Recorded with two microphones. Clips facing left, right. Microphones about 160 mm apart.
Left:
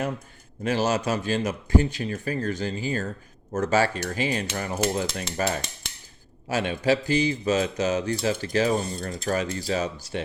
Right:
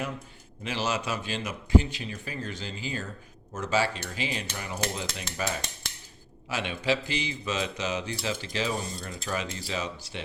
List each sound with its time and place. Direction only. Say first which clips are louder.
0.6 s speech: left 7 dB; 45° left (ahead or behind)